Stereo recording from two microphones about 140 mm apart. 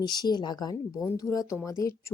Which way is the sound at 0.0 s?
30° left (ahead or behind).